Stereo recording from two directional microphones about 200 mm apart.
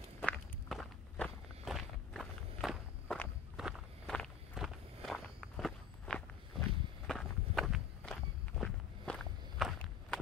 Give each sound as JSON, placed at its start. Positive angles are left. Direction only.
{"t": 0.2, "sound": "walk", "side_deg": 5}